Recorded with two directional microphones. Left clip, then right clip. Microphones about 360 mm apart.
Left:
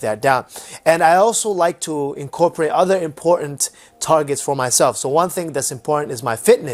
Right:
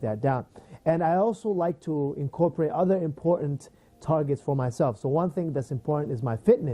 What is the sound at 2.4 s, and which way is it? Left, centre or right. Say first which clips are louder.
Speech: left 9 dB; centre.